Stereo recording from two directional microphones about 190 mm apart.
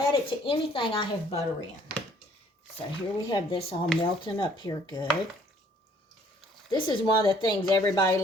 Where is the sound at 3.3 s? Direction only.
25° left (ahead or behind).